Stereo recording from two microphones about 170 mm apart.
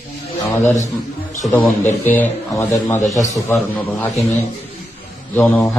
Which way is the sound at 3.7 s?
5° left (ahead or behind).